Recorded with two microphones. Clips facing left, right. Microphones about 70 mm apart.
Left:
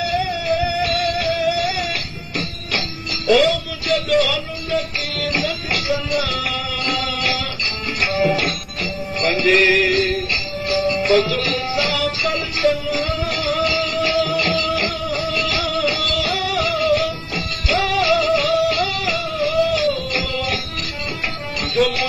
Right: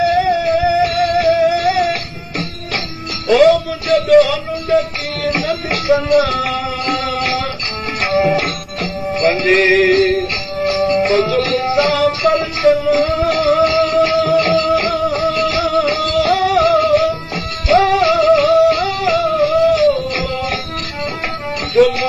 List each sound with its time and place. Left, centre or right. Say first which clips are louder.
0.0 s music: right 8 dB; right
3.3 s music: right 6 dB; right
9.1 s music: right 4 dB; right